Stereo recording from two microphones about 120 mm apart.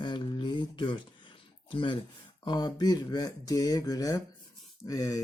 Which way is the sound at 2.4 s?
35° left (ahead or behind).